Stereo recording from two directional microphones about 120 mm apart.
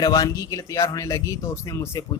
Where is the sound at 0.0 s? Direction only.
35° left (ahead or behind).